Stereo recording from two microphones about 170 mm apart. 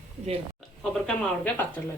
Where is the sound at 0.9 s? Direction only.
5° left (ahead or behind).